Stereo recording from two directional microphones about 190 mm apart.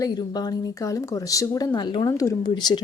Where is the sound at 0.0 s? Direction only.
20° left (ahead or behind).